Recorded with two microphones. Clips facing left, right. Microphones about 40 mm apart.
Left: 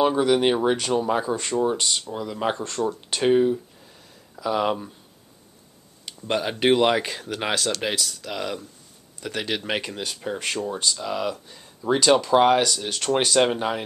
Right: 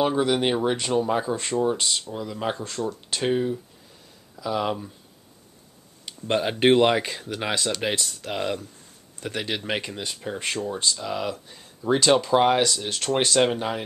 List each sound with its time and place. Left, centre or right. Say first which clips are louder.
0.0 s speech: left 3 dB; centre
2.9 s speech: left 5 dB; centre
6.8 s speech: even; centre
7.5 s speech: even; centre
7.9 s speech: even; right
9.3 s speech: left 1 dB; centre
10.4 s speech: even; centre
12.0 s speech: left 2 dB; centre